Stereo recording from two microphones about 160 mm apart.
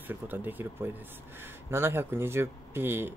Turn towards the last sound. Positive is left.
turn(degrees=-15)  # may be behind; listen again after turning